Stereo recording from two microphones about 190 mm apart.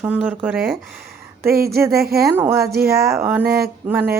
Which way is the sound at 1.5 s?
55° right (ahead or behind).